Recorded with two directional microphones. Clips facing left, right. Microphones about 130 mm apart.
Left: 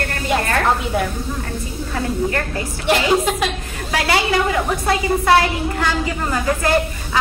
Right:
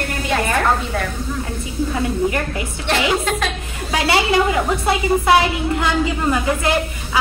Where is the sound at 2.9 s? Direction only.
5° left (ahead or behind).